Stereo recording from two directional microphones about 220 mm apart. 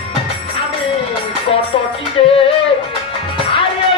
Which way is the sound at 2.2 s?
25° left (ahead or behind).